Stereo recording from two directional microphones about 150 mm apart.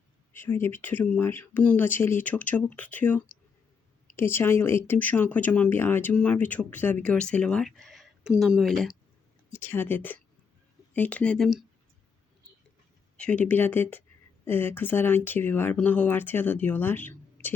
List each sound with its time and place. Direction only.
0.3 s speech: 15° left (ahead or behind)
9.5 s speech: 15° left (ahead or behind)
13.1 s speech: 10° left (ahead or behind)